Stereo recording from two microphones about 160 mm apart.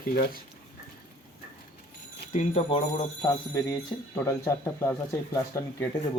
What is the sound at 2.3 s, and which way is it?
Speech, 40° left (ahead or behind).